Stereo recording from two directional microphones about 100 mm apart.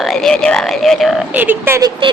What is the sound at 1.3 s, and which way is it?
Speech, 20° right (ahead or behind).